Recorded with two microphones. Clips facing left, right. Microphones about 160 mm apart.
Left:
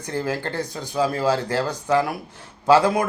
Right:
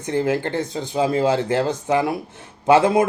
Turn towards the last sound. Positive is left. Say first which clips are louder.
# right 2 dB
turn(degrees=-25)  # may be behind; listen again after turning